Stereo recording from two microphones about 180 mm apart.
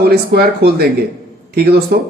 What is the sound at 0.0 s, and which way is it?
A man's voice, 60° right (ahead or behind).